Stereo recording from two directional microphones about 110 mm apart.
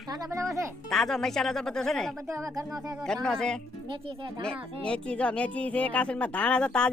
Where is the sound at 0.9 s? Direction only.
5° left (ahead or behind).